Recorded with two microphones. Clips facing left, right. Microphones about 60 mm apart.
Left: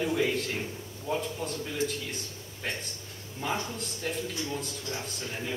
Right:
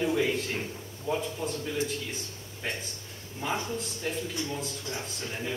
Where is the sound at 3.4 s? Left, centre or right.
Centre.